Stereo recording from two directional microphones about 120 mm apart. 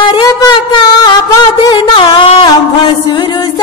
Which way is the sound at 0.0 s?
40° left (ahead or behind).